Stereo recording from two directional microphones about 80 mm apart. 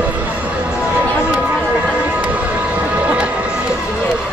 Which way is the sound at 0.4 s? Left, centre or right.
Centre.